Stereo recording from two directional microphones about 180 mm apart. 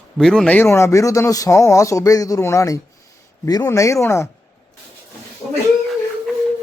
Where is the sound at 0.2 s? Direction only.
5° left (ahead or behind).